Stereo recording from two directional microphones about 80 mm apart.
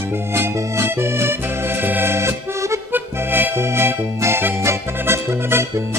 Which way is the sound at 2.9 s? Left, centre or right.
Right.